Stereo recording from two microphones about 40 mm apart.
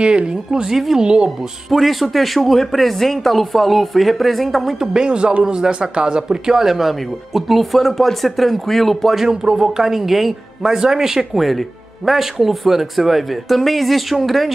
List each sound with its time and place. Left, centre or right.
0.0 s speech: right
1.7 s speech: centre
4.7 s speech: centre
9.2 s speech: centre